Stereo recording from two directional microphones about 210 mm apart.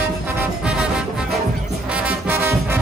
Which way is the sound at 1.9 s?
10° right (ahead or behind).